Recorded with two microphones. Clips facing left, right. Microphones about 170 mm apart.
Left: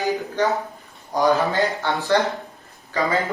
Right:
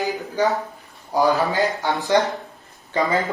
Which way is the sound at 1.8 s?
15° right (ahead or behind).